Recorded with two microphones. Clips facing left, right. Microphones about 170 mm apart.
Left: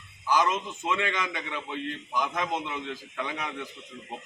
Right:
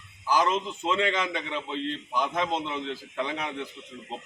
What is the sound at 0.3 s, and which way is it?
A man's voice, 30° right (ahead or behind).